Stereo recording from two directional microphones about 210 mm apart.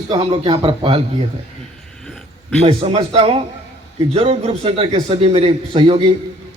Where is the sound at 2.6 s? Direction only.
25° right (ahead or behind).